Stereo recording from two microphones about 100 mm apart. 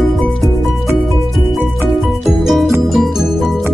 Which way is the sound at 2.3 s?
Centre (ahead or behind).